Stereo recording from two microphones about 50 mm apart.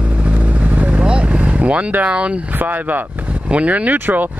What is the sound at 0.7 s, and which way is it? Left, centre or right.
Vehicle, right.